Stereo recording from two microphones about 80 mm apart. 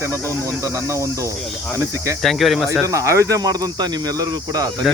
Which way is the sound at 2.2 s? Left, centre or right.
Centre.